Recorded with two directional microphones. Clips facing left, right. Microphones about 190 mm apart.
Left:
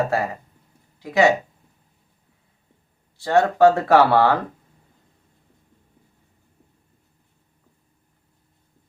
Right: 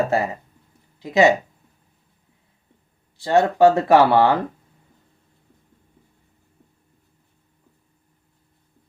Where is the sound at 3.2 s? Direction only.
20° right (ahead or behind).